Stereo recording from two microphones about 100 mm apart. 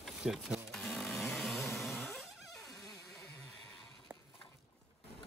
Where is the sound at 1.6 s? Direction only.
25° left (ahead or behind).